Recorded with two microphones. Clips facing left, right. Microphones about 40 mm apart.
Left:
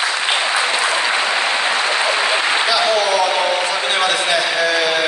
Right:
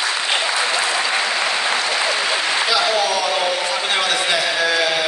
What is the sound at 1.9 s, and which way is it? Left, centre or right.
Applause, left.